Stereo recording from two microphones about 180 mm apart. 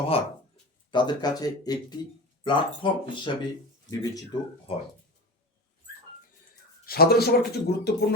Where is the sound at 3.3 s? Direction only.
25° left (ahead or behind).